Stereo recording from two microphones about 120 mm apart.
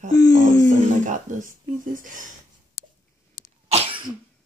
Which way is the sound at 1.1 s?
90° right.